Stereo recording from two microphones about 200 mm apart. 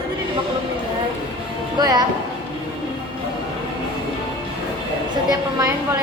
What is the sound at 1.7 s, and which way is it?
Music, 20° right (ahead or behind).